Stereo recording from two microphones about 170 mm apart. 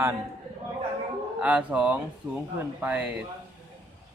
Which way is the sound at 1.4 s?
5° right (ahead or behind).